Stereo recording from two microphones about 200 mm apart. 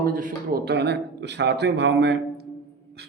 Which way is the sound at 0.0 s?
45° right (ahead or behind).